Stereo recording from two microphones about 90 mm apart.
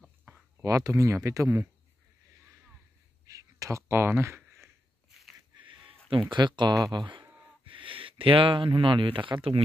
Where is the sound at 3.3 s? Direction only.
40° right (ahead or behind).